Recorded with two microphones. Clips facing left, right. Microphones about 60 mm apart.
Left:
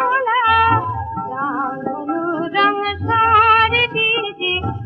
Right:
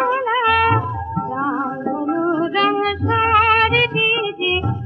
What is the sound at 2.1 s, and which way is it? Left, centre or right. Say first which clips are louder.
Music: right 2 dB; centre.